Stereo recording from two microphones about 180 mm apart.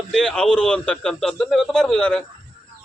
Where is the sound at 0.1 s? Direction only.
5° left (ahead or behind).